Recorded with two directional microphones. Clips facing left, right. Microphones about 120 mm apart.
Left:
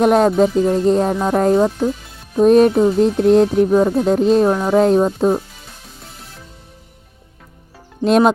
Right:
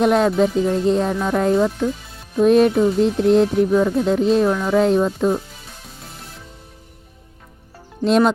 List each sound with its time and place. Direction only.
0.0 s music: 45° left (ahead or behind)